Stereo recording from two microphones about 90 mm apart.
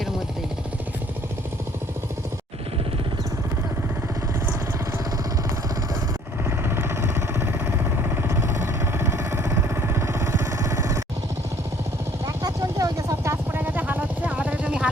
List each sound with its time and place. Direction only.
6.7 s vehicle: 25° right (ahead or behind)
12.2 s vehicle: 40° right (ahead or behind); by 14.8 s 15° right (ahead or behind)